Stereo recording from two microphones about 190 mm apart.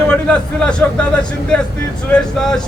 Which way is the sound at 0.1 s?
5° left (ahead or behind).